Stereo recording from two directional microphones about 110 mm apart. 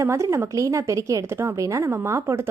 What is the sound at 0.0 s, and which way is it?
A woman's voice, 25° right (ahead or behind).